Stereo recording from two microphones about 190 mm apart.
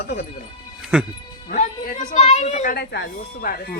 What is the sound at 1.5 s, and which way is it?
A woman's voice, 45° left (ahead or behind).